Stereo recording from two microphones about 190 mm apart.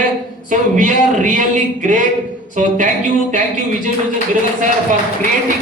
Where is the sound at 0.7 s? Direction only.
40° right (ahead or behind).